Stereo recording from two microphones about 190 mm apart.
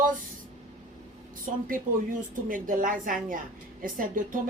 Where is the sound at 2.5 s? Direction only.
45° right (ahead or behind).